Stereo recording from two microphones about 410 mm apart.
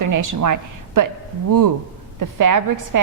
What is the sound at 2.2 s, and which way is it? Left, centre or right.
Speech, right.